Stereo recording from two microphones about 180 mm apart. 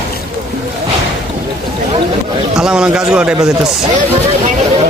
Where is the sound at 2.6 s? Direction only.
5° right (ahead or behind).